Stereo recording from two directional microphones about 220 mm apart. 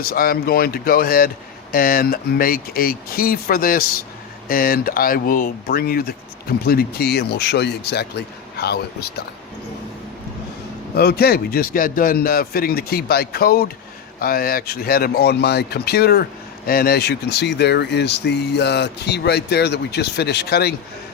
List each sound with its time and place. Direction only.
0.0 s speech: 40° left (ahead or behind)
10.9 s speech: 45° left (ahead or behind)